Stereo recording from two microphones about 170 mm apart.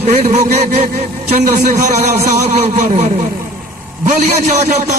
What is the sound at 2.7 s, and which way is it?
Speech, 45° right (ahead or behind).